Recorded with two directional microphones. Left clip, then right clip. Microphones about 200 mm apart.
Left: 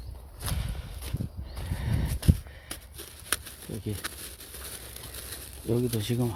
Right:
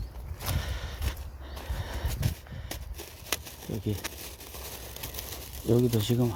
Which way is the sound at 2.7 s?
15° left (ahead or behind).